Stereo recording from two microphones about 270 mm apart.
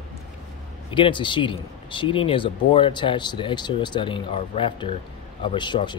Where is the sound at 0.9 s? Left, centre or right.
Centre.